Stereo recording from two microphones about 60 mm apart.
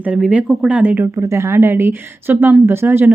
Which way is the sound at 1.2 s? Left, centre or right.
Right.